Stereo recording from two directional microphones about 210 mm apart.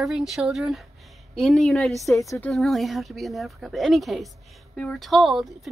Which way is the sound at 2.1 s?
15° left (ahead or behind).